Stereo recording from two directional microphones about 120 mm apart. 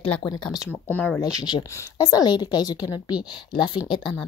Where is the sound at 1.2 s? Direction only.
35° left (ahead or behind).